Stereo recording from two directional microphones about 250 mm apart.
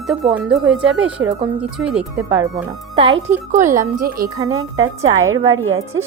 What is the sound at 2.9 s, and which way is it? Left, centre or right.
Speech, right.